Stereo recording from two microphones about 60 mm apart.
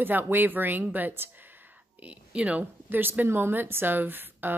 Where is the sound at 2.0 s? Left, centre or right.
Centre.